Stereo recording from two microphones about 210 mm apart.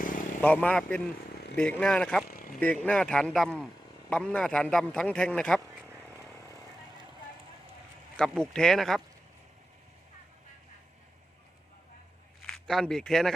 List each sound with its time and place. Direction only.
0.4 s a man's voice: 5° left (ahead or behind)
2.3 s vehicle: 40° left (ahead or behind)
2.6 s a man's voice: 5° left (ahead or behind)
5.8 s vehicle: 10° right (ahead or behind)
8.1 s a man's voice: 5° left (ahead or behind)
12.4 s speech: centre (ahead or behind)